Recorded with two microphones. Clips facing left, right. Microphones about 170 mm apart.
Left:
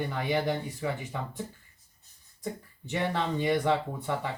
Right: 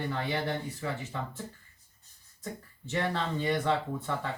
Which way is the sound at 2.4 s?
15° left (ahead or behind).